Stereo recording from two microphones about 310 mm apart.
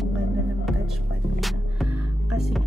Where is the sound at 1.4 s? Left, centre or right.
Centre.